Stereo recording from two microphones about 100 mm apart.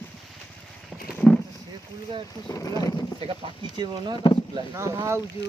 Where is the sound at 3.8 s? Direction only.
45° right (ahead or behind).